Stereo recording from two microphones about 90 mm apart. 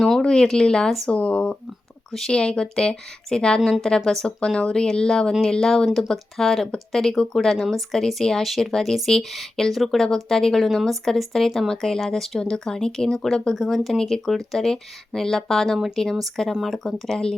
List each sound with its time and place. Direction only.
0.0 s speech: 5° left (ahead or behind)
1.1 s a woman's voice: 15° left (ahead or behind)